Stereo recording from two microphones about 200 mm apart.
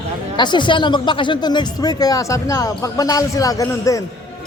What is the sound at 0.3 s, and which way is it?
Speech, 20° left (ahead or behind).